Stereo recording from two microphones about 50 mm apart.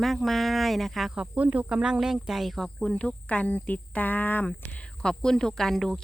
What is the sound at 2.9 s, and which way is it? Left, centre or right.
Speech, left.